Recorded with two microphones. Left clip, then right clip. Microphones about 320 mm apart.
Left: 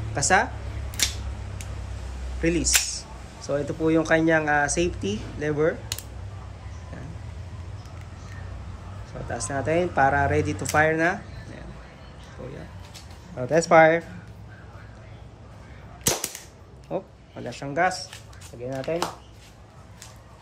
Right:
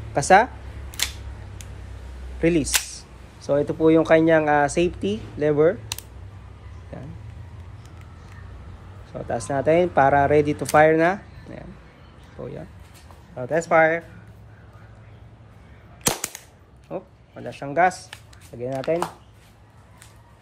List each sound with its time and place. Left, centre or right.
0.1 s speech: centre
2.4 s speech: centre
9.3 s speech: centre
13.4 s speech: centre
16.9 s speech: centre